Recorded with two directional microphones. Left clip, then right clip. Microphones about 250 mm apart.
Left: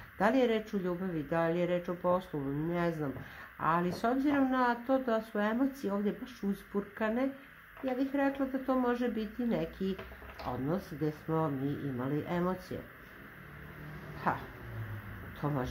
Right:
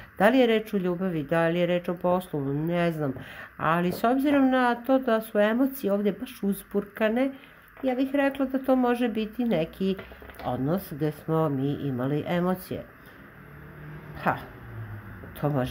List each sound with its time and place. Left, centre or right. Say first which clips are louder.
0.2 s speech: right 8 dB; right
14.2 s speech: right 6 dB; right
15.4 s speech: right 8 dB; right